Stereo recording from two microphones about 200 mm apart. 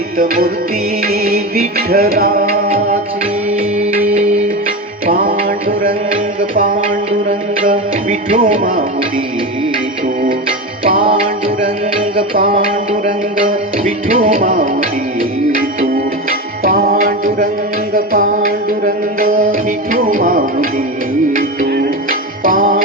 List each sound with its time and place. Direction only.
0.2 s music: 45° right (ahead or behind)
5.0 s music: 45° right (ahead or behind)
8.4 s music: 45° right (ahead or behind)
12.1 s music: 45° right (ahead or behind)
16.6 s music: 45° right (ahead or behind)